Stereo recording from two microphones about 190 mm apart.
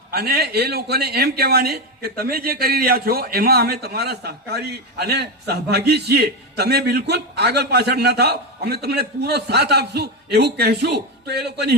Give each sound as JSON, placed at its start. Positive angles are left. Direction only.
{"t": 0.1, "sound": "speech", "side_deg": -55}